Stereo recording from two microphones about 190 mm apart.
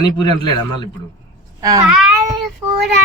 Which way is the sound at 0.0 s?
20° left (ahead or behind).